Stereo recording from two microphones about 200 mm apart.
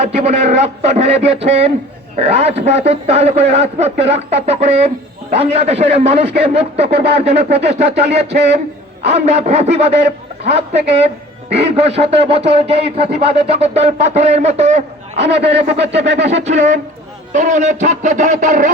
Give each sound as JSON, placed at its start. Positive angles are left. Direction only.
{"t": 0.0, "sound": "speech", "side_deg": -35}
{"t": 15.2, "sound": "speech", "side_deg": -60}
{"t": 16.4, "sound": "speech", "side_deg": -35}